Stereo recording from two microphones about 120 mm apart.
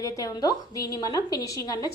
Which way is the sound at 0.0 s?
30° left (ahead or behind).